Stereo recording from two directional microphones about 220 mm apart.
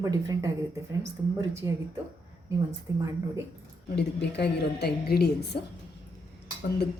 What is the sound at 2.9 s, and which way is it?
Speech, 15° right (ahead or behind).